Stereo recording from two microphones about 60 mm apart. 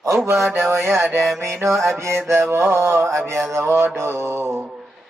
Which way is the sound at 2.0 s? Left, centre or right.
Right.